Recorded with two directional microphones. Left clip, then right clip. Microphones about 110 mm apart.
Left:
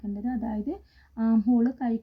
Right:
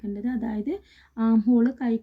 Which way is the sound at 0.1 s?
20° right (ahead or behind).